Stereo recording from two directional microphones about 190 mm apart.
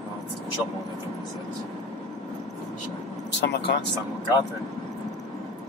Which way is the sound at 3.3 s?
65° left (ahead or behind).